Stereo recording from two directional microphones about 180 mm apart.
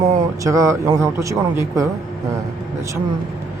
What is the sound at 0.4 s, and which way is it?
A man's voice, 15° right (ahead or behind).